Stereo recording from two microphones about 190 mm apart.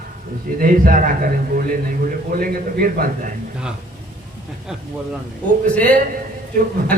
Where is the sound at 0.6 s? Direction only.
45° right (ahead or behind).